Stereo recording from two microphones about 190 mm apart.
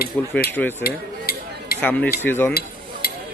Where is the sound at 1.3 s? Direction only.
55° left (ahead or behind).